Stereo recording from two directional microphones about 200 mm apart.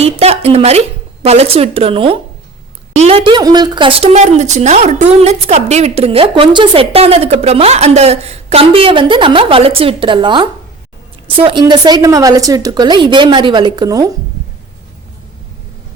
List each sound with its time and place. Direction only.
0.0 s a woman's voice: 30° right (ahead or behind)